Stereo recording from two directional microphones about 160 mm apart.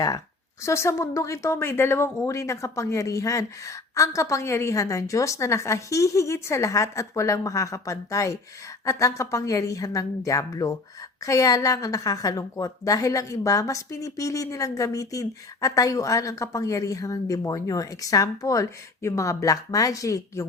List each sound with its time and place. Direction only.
0.6 s a woman's voice: 15° left (ahead or behind)